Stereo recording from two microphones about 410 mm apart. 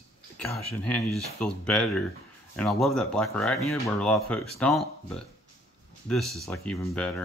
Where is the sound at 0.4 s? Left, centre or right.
Centre.